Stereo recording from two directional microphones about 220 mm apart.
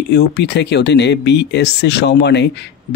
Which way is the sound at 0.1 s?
50° left (ahead or behind).